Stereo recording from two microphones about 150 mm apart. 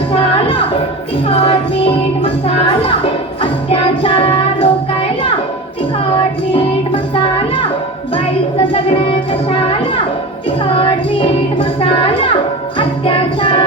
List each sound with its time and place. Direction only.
0.1 s music: 40° left (ahead or behind)
1.3 s speech: 40° left (ahead or behind)
6.5 s music: 35° left (ahead or behind)
8.7 s speech: 35° left (ahead or behind)
10.8 s speech: 35° left (ahead or behind)